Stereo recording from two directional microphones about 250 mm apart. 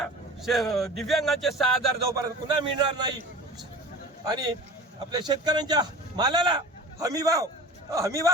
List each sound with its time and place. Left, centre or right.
0.0 s speech: centre
2.2 s a man's voice: centre
4.3 s a man's voice: centre